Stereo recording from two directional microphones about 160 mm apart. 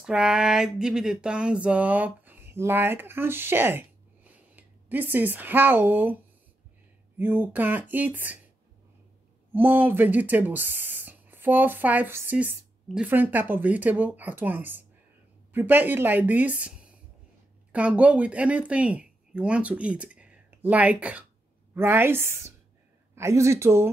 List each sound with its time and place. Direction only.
0.0 s a sound: 5° right (ahead or behind)
7.2 s speech: 10° right (ahead or behind)
9.5 s speech: 10° right (ahead or behind)